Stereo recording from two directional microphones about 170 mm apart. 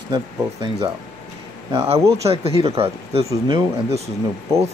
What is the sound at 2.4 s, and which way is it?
Speech, 35° right (ahead or behind).